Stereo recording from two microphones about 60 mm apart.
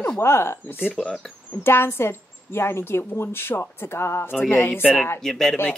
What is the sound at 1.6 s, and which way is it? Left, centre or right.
A woman's voice, left.